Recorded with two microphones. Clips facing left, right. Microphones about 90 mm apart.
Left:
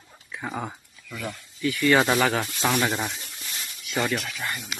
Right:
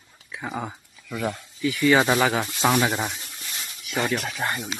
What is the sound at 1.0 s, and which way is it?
Speech, 25° right (ahead or behind).